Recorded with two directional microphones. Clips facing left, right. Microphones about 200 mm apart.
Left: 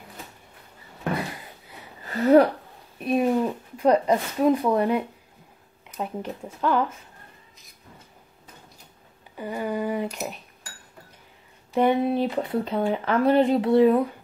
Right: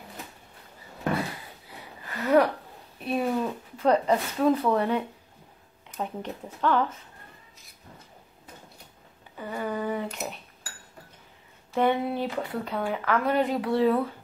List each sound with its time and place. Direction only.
2.0 s speech: 30° left (ahead or behind)
3.0 s speech: 15° left (ahead or behind)
9.4 s speech: 15° left (ahead or behind)
10.0 s speech: centre (ahead or behind)
11.7 s speech: 15° left (ahead or behind)